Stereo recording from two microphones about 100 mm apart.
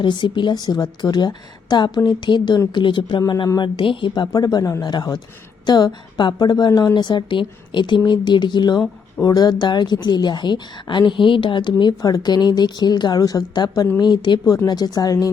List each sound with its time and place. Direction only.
0.0 s a woman's voice: 50° left (ahead or behind)
3.8 s a woman's voice: 60° left (ahead or behind); by 6.9 s 40° left (ahead or behind)
6.9 s a woman's voice: 50° left (ahead or behind)